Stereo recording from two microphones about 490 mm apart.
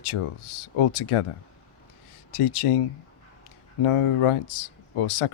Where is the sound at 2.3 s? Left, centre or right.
Left.